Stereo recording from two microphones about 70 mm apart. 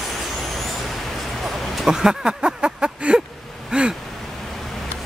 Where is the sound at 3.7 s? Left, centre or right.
Centre.